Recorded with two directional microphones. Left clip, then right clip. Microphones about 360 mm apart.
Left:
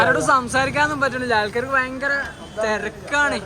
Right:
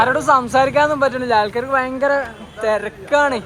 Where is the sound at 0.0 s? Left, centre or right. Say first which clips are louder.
Right 2 dB; centre.